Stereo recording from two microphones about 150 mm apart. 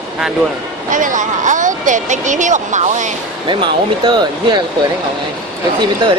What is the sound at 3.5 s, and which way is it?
Speech, 30° right (ahead or behind).